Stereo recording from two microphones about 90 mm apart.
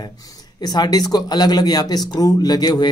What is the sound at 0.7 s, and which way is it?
Speech, 50° left (ahead or behind).